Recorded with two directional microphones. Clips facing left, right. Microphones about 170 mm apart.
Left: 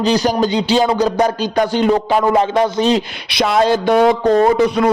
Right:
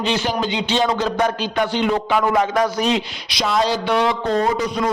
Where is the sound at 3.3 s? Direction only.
60° left (ahead or behind).